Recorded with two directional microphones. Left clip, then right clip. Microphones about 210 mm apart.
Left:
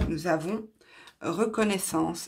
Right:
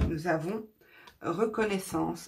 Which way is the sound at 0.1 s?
40° left (ahead or behind).